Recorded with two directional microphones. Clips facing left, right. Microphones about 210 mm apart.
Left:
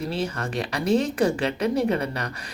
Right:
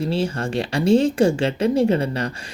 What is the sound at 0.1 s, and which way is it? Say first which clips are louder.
Speech: right 5 dB; 30° right (ahead or behind).